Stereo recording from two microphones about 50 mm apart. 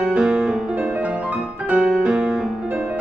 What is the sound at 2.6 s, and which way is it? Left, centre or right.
Music, right.